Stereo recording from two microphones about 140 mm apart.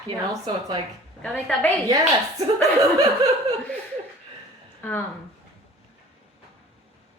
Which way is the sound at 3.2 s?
25° right (ahead or behind).